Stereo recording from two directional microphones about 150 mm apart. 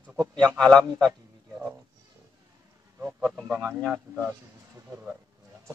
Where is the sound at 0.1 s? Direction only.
5° left (ahead or behind).